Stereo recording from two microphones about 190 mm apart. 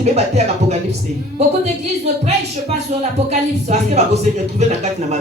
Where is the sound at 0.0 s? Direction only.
35° right (ahead or behind).